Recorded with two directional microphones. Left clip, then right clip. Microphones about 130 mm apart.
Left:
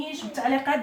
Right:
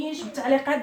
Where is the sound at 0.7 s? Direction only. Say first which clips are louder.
Even; 40° left (ahead or behind).